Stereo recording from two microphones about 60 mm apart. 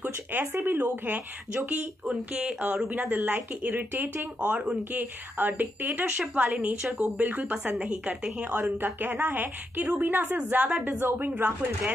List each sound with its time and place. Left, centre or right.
0.0 s a woman's voice: right
4.4 s a woman's voice: right
6.6 s a woman's voice: centre
7.2 s a woman's voice: right